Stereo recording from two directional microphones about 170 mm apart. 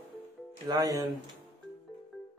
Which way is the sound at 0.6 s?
20° right (ahead or behind).